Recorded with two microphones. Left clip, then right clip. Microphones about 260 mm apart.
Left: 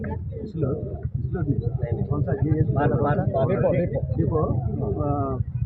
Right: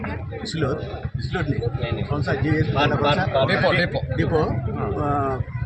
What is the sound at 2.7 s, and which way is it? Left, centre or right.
Speech, right.